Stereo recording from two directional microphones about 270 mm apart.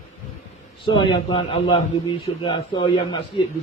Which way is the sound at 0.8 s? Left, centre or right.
Centre.